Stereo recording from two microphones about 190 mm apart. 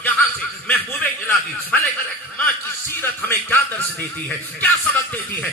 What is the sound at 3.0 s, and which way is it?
A man's voice, 10° left (ahead or behind).